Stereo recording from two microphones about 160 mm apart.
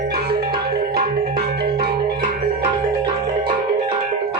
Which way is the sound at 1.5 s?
85° right.